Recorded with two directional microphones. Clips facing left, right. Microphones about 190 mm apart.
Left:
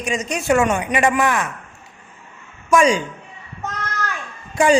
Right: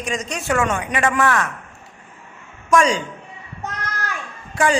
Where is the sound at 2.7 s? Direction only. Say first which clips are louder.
Left 2 dB; 10° left (ahead or behind).